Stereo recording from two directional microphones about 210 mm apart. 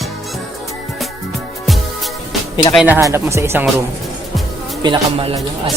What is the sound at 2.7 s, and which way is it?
Speech, 10° right (ahead or behind).